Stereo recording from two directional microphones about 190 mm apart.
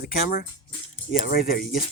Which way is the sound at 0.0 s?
50° left (ahead or behind).